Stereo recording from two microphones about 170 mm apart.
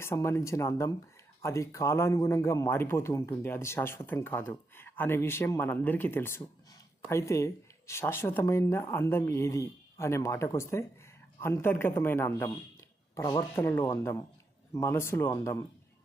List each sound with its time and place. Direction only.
0.0 s speech: 15° left (ahead or behind)